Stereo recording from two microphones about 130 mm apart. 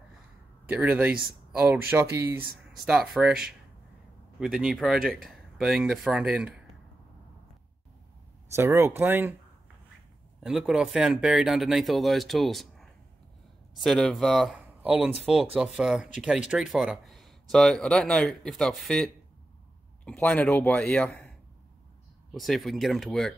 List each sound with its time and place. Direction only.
0.7 s speech: 10° right (ahead or behind)
2.8 s speech: 5° right (ahead or behind)
8.5 s speech: 20° right (ahead or behind)
10.4 s speech: 5° right (ahead or behind)
14.8 s speech: 10° right (ahead or behind)
20.1 s a man's voice: 10° left (ahead or behind)
22.3 s speech: centre (ahead or behind)